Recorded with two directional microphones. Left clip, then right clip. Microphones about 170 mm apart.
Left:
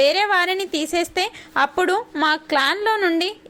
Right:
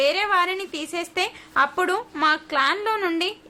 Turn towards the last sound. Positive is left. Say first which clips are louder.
# left 4 dB
turn(degrees=20)  # may be behind; listen again after turning